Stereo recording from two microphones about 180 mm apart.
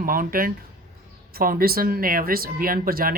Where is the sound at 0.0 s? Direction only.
50° right (ahead or behind).